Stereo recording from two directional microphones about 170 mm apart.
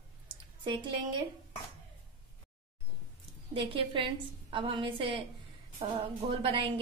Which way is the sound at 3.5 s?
30° right (ahead or behind).